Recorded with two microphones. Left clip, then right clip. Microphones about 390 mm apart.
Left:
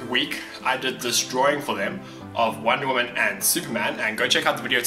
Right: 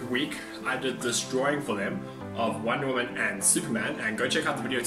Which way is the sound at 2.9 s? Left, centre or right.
Centre.